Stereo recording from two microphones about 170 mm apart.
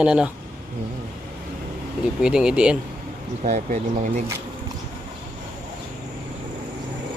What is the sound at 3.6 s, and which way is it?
Speech, 45° right (ahead or behind).